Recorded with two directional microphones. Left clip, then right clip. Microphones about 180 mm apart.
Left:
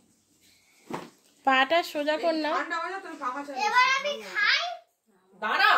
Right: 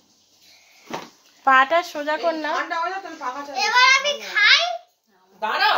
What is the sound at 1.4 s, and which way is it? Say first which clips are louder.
Speech: right 6 dB; 20° left (ahead or behind).